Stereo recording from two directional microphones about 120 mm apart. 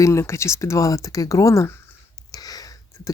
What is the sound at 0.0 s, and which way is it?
Speech, 25° left (ahead or behind).